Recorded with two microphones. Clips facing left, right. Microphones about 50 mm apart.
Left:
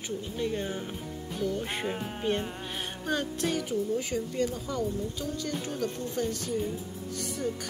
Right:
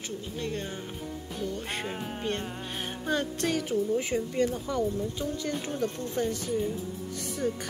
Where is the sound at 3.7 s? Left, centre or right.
Right.